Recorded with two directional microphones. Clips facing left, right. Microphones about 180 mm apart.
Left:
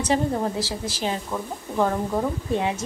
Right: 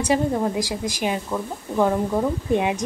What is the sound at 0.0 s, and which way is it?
Speech, 10° right (ahead or behind).